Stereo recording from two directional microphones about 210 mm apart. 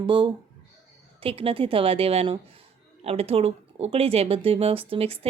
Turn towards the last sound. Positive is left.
turn(degrees=-25)  # may be behind; listen again after turning